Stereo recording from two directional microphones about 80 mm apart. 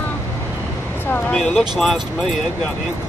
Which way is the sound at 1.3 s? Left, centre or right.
Centre.